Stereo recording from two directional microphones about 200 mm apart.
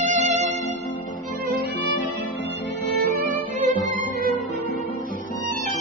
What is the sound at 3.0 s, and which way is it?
Violin, 45° right (ahead or behind).